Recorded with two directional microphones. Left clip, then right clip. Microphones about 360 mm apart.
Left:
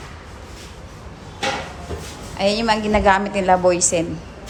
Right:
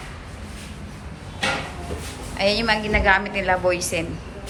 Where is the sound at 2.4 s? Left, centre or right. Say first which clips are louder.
Left 2 dB; centre.